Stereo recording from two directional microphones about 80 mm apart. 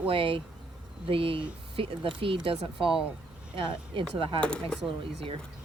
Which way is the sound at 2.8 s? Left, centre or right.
Right.